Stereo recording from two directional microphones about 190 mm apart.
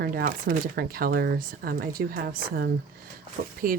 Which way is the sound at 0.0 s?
50° right (ahead or behind).